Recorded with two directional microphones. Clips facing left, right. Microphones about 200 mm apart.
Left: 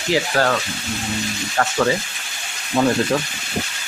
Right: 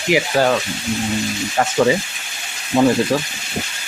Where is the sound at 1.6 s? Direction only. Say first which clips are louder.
Right 3 dB; 15° right (ahead or behind).